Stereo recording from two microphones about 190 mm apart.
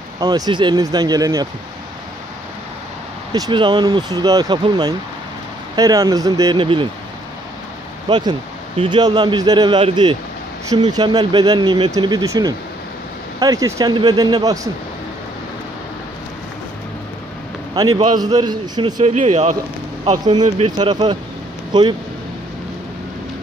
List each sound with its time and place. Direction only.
0.2 s speech: 25° right (ahead or behind)
3.3 s speech: 20° right (ahead or behind)
8.1 s speech: 25° right (ahead or behind)
17.7 s speech: 20° right (ahead or behind)
19.0 s speech: 35° right (ahead or behind)
20.1 s speech: 20° right (ahead or behind)